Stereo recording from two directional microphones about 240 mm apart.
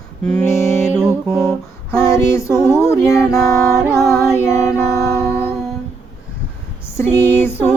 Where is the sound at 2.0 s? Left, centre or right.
Centre.